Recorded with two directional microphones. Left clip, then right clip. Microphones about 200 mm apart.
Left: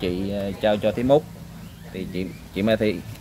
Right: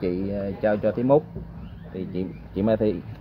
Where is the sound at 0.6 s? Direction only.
Centre (ahead or behind).